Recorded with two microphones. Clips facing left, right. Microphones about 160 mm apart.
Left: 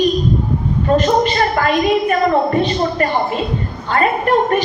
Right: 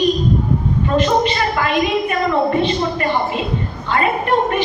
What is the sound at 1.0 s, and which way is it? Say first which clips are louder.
A woman's voice: even; 45° left (ahead or behind).